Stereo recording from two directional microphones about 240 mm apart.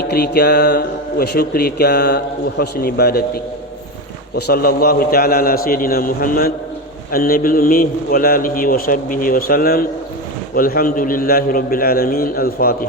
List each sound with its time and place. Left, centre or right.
0.0 s speech: left